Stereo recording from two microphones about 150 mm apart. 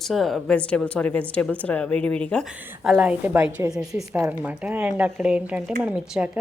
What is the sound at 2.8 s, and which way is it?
A woman's voice, 5° right (ahead or behind).